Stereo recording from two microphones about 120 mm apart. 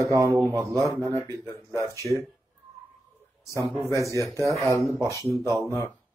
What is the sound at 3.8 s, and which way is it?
Speech, 25° right (ahead or behind).